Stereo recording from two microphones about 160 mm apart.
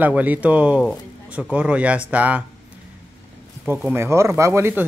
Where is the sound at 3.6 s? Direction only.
10° right (ahead or behind).